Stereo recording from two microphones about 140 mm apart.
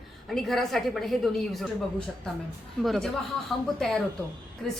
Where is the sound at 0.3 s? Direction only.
Centre (ahead or behind).